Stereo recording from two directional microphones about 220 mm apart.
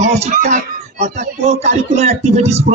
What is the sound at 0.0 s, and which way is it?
A man's voice, 30° right (ahead or behind).